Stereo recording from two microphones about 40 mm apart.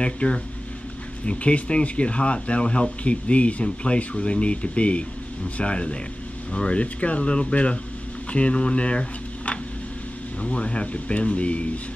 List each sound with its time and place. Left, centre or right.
0.0 s speech: left
10.4 s speech: left